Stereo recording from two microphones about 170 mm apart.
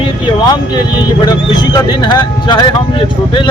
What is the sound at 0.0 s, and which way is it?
Speech, 25° left (ahead or behind).